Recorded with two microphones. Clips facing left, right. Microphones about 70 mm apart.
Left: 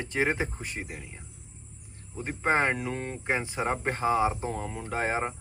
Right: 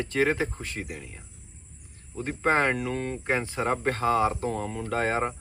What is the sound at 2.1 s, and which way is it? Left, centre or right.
Speech, centre.